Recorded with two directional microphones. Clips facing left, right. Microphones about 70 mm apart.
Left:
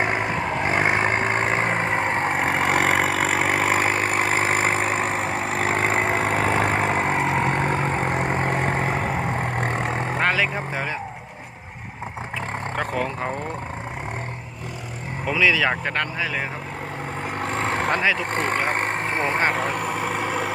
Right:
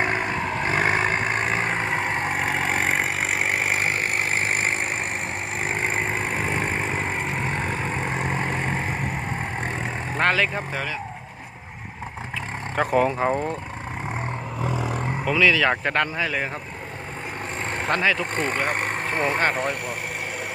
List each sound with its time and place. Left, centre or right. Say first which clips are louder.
0.0 s vehicle: left 1 dB; centre
1.1 s vehicle: left 2 dB; left
5.6 s vehicle: left 4 dB; left
7.2 s vehicle: left 6 dB; left
7.4 s vehicle: left 5 dB; left
8.8 s vehicle: left 4 dB; left
9.6 s vehicle: left 4 dB; left
10.2 s vehicle: right 2 dB; centre
12.7 s speech: right 7 dB; centre
15.2 s speech: even; centre
15.7 s speech: right 2 dB; centre
17.4 s vehicle: left 6 dB; left
17.8 s speech: right 3 dB; centre
18.3 s speech: left 2 dB; left